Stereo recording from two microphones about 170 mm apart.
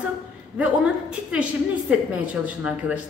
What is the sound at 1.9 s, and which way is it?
A woman's voice, 10° right (ahead or behind).